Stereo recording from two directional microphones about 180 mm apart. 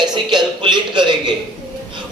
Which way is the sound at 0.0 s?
25° right (ahead or behind).